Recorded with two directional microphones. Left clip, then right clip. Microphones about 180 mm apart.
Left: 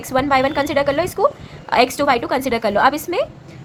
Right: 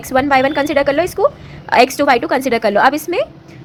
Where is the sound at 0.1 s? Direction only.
15° right (ahead or behind).